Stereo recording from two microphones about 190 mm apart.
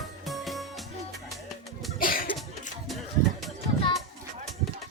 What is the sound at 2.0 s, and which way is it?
Cough, 45° left (ahead or behind).